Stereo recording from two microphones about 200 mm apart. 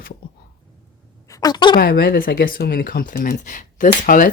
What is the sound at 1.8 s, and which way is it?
Speech, 50° left (ahead or behind).